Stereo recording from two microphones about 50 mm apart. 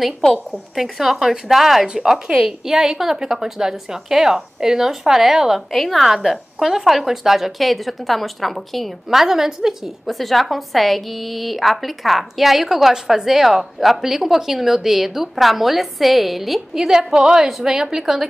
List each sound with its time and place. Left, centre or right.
0.0 s a woman's voice: centre